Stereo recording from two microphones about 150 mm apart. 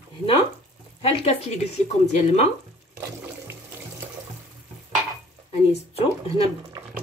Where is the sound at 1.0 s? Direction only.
45° left (ahead or behind).